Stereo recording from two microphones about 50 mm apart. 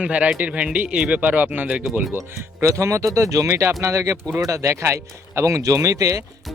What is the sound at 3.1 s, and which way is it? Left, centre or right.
Speech, right.